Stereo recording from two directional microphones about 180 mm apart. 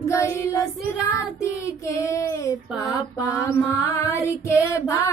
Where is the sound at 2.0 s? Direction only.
15° left (ahead or behind).